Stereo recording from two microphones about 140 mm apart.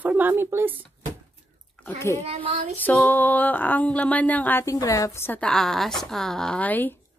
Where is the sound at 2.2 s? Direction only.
45° right (ahead or behind).